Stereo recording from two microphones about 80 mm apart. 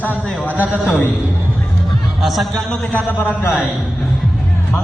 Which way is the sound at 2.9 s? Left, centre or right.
Left.